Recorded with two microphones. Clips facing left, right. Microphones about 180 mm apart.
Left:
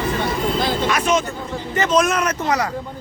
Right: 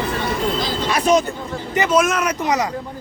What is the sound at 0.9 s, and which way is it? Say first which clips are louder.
Speech: right 3 dB; 35° right (ahead or behind).